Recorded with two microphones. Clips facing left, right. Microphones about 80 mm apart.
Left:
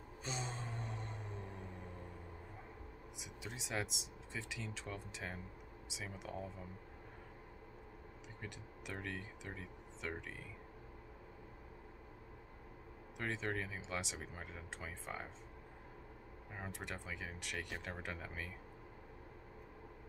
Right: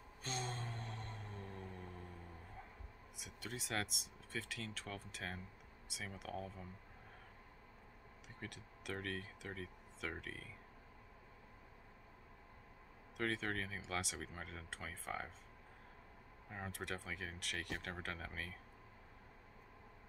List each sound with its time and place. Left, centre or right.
0.2 s music: centre
3.2 s speech: centre
8.4 s speech: centre
13.2 s speech: centre
16.4 s speech: centre